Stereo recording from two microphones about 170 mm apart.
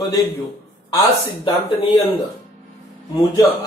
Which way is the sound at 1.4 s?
30° left (ahead or behind).